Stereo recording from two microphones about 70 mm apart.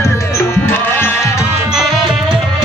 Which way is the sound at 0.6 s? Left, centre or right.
Left.